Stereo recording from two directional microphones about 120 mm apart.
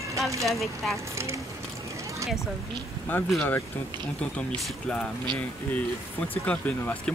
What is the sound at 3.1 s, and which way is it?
Speech, 15° left (ahead or behind).